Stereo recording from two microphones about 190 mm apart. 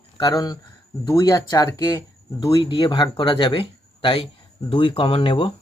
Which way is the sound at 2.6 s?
25° left (ahead or behind).